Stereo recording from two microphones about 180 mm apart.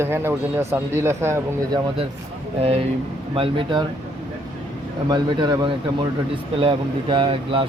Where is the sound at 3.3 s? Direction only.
30° right (ahead or behind).